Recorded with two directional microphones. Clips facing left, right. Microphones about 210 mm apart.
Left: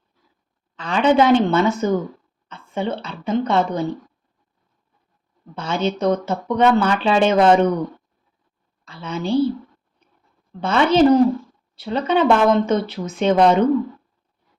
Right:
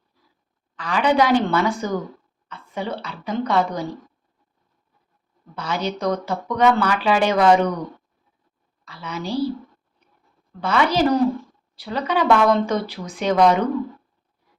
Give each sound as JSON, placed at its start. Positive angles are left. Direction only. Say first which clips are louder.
{"t": 0.8, "sound": "speech", "louder": "left 3 dB", "side_deg": 25}
{"t": 5.5, "sound": "speech", "louder": "left 4 dB", "side_deg": 25}
{"t": 8.8, "sound": "speech", "louder": "left 4 dB", "side_deg": 25}
{"t": 10.6, "sound": "speech", "louder": "left 4 dB", "side_deg": 25}